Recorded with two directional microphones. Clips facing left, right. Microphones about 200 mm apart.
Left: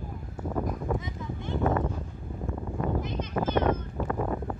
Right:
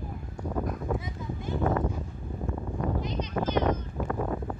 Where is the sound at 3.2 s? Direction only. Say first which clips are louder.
Even; 50° left (ahead or behind).